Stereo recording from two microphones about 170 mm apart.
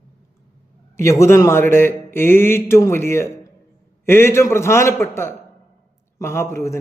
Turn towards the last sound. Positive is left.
turn(degrees=15)  # may be behind; listen again after turning